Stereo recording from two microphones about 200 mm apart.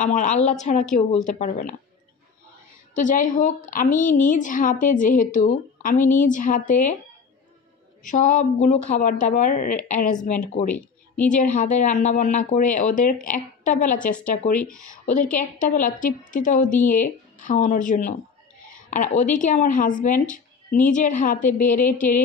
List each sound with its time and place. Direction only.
0.0 s a woman's voice: 40° left (ahead or behind)
3.0 s a woman's voice: 40° left (ahead or behind)
8.0 s a woman's voice: 40° left (ahead or behind)
10.7 s a woman's voice: 5° left (ahead or behind)
11.3 s a woman's voice: 40° left (ahead or behind)